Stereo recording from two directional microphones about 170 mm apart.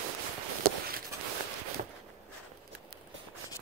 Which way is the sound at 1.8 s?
50° right (ahead or behind).